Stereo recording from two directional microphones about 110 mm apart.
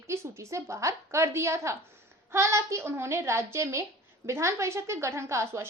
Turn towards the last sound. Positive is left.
turn(degrees=-25)  # may be behind; listen again after turning